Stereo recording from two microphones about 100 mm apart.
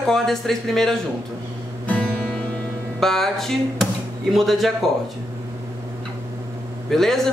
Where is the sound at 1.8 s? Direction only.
10° left (ahead or behind).